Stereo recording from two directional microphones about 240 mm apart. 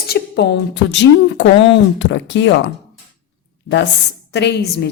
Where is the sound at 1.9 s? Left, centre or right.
Left.